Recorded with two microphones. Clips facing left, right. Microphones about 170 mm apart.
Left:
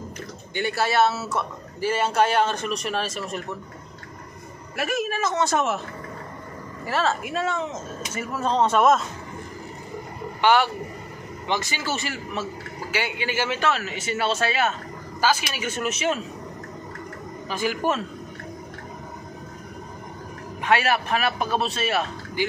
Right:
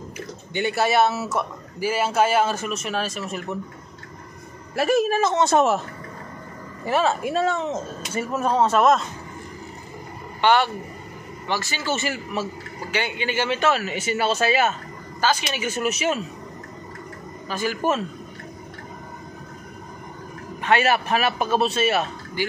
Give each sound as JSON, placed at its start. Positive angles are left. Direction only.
{"t": 0.6, "sound": "speech", "side_deg": -20}
{"t": 4.7, "sound": "speech", "side_deg": -35}
{"t": 6.9, "sound": "speech", "side_deg": -15}
{"t": 7.2, "sound": "speech", "side_deg": -35}
{"t": 8.4, "sound": "a man's voice", "side_deg": -10}
{"t": 10.4, "sound": "a man's voice", "side_deg": 10}
{"t": 11.9, "sound": "a man's voice", "side_deg": -5}
{"t": 12.9, "sound": "a man's voice", "side_deg": 5}
{"t": 13.7, "sound": "a man's voice", "side_deg": -5}
{"t": 15.1, "sound": "speech", "side_deg": 10}
{"t": 15.6, "sound": "a man's voice", "side_deg": -5}
{"t": 17.5, "sound": "a man's voice", "side_deg": 15}
{"t": 20.6, "sound": "a man's voice", "side_deg": 0}